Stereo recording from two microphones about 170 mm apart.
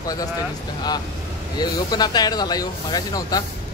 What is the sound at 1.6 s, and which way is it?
Speech, 25° left (ahead or behind).